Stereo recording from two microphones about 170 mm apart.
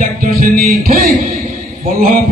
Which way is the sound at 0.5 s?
60° right (ahead or behind).